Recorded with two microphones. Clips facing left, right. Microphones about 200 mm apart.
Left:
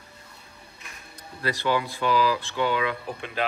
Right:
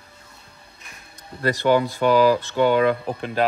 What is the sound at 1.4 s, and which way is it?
Speech, 45° right (ahead or behind).